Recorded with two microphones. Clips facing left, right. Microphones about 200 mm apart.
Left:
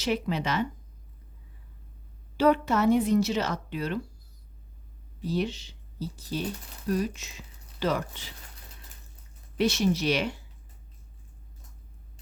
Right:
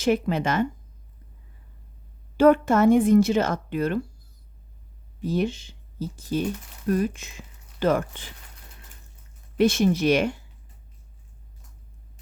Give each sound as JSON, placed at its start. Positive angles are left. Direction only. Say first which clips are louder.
{"t": 0.0, "sound": "speech", "louder": "right 6 dB", "side_deg": -50}
{"t": 2.4, "sound": "speech", "louder": "right 6 dB", "side_deg": -50}
{"t": 5.2, "sound": "speech", "louder": "right 4 dB", "side_deg": -50}
{"t": 9.6, "sound": "speech", "louder": "right 5 dB", "side_deg": -50}